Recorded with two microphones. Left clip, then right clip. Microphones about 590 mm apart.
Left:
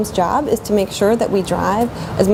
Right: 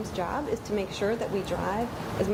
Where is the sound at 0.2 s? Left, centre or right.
Left.